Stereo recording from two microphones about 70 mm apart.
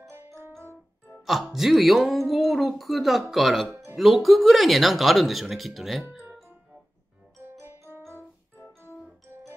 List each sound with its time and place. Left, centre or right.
1.2 s speech: centre
8.1 s music: left